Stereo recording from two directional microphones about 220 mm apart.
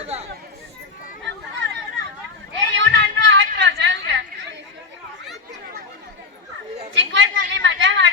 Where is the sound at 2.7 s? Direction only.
55° right (ahead or behind).